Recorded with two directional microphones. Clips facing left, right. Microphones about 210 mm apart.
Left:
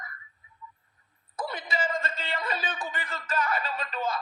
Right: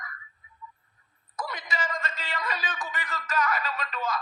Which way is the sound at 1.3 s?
30° left (ahead or behind).